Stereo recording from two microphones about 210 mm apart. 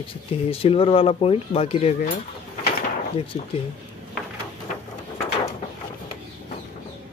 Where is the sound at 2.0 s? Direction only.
40° left (ahead or behind).